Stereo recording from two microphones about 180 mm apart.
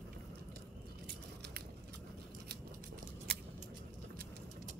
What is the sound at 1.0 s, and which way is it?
Biting, 65° right (ahead or behind).